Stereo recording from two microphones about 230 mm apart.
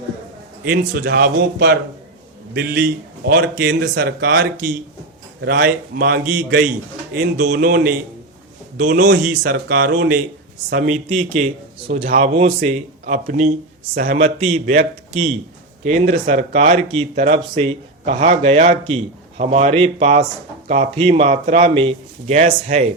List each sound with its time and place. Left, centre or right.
0.6 s a man's voice: right
9.0 s a man's voice: right